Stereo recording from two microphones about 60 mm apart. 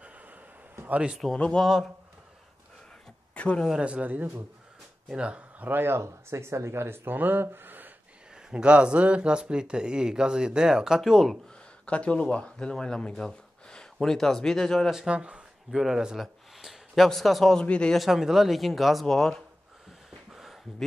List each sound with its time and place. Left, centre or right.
1.2 s speech: centre
3.3 s speech: left
3.8 s speech: right
5.7 s speech: right
8.5 s speech: centre
11.8 s speech: centre
14.9 s speech: centre
15.7 s speech: centre
17.6 s speech: centre
17.9 s speech: centre